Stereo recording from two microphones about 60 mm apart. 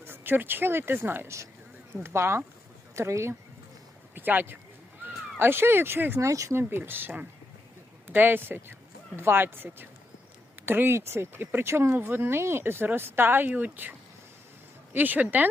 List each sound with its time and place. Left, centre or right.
0.0 s speech: right
4.1 s speech: right
5.0 s a sound: right
5.4 s speech: right
6.2 s speech: right
6.5 s speech: right
11.9 s speech: right
14.9 s speech: right